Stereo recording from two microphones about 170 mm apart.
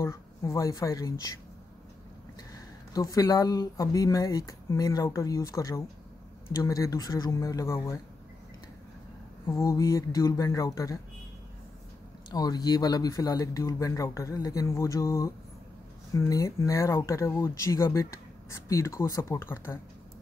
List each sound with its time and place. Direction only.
0.0 s speech: 15° left (ahead or behind)
2.9 s speech: 20° left (ahead or behind)
9.5 s speech: 20° left (ahead or behind)
12.3 s speech: 25° left (ahead or behind)